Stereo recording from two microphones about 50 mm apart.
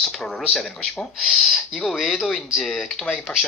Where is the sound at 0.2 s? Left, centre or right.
Centre.